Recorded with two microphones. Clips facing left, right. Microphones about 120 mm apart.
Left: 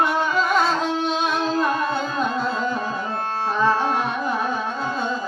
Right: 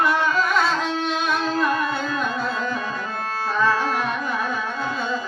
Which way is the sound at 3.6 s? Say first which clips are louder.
Left 1 dB; 20° left (ahead or behind).